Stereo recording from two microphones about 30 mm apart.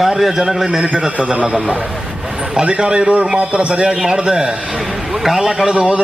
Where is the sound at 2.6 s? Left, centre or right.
Right.